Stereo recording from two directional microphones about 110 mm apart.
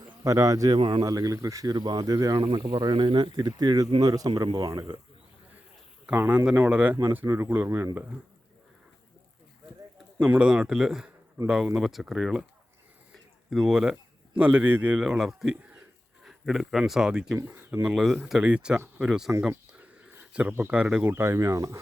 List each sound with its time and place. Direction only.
0.3 s speech: 30° right (ahead or behind)
0.8 s speech: 50° right (ahead or behind)
1.0 s speech: 30° right (ahead or behind)
2.7 s speech: 45° right (ahead or behind)
4.0 s speech: 35° right (ahead or behind)
6.1 s speech: 15° right (ahead or behind)
10.2 s speech: 10° right (ahead or behind)
13.5 s speech: 5° right (ahead or behind)
14.9 s speech: 5° right (ahead or behind)
17.3 s speech: 20° right (ahead or behind)
17.8 s speech: centre (ahead or behind)
19.5 s a sound: 15° right (ahead or behind)
20.5 s speech: 15° right (ahead or behind)
21.0 s speech: 25° right (ahead or behind)